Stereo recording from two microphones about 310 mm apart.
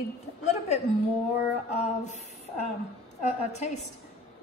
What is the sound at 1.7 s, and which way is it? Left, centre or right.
A woman's voice, left.